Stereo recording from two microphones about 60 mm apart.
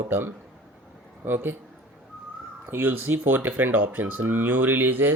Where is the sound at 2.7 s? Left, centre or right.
Right.